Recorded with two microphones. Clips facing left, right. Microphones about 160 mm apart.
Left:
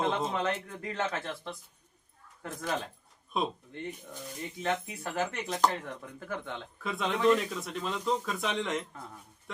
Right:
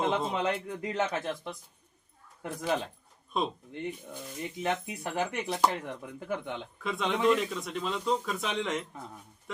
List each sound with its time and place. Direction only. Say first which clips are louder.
0.0 s speech: right 1 dB; 20° right (ahead or behind)
2.4 s speech: right 4 dB; 15° right (ahead or behind)
3.3 s speech: right 1 dB; centre (ahead or behind)
3.7 s speech: right 3 dB; 15° right (ahead or behind)
6.8 s speech: even; centre (ahead or behind)